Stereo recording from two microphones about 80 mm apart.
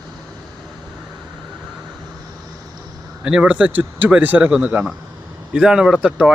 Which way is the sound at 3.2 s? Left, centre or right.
Centre.